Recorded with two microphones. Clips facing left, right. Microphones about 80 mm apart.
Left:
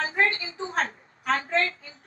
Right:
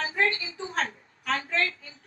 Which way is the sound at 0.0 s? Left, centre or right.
Left.